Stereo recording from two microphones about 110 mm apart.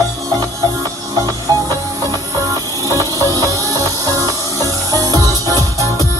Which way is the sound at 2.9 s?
25° left (ahead or behind).